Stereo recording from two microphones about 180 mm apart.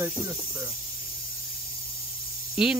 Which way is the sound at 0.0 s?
15° right (ahead or behind).